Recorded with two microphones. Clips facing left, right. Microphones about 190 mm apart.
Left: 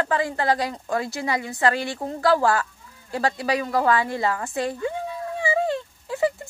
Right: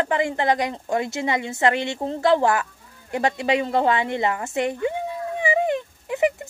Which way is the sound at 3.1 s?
20° right (ahead or behind).